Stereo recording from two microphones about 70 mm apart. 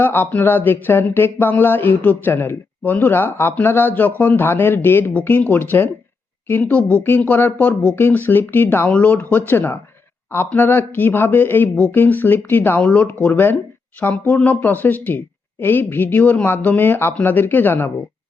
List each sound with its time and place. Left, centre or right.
0.0 s speech: left